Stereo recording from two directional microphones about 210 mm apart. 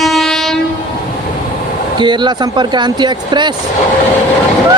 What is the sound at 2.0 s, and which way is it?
Speech, 20° right (ahead or behind).